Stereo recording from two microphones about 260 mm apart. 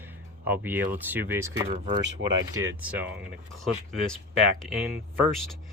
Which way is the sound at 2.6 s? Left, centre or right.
Right.